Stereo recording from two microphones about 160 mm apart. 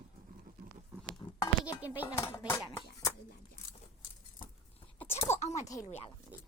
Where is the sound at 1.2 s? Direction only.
30° left (ahead or behind).